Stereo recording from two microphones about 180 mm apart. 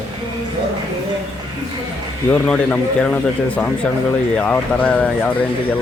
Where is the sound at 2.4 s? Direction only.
5° left (ahead or behind).